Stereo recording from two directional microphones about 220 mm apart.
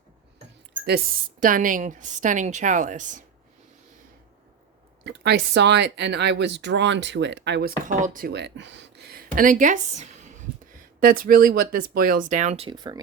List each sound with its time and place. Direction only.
0.9 s a woman's voice: 40° right (ahead or behind)
5.0 s speech: 50° right (ahead or behind)
7.9 s a woman's voice: 35° right (ahead or behind); by 13.0 s 20° right (ahead or behind)